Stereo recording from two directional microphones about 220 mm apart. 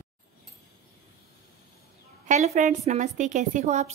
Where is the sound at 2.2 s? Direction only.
35° right (ahead or behind).